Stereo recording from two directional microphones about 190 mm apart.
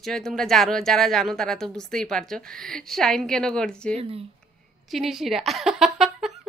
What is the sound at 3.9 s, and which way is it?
Speech, 30° right (ahead or behind).